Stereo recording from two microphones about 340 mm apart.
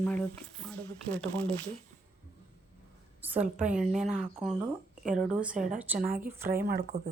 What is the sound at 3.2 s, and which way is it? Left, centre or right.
A woman's voice, centre.